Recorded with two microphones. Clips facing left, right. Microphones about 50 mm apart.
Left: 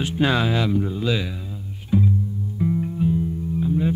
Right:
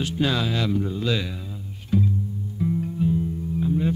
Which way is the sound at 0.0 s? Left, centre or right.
Left.